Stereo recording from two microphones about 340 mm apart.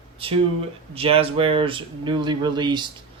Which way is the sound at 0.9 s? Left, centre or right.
Centre.